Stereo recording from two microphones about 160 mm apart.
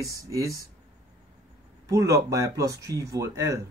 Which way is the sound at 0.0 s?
20° right (ahead or behind).